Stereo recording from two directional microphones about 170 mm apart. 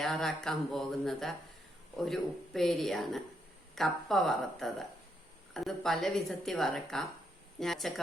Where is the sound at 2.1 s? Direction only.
Centre (ahead or behind).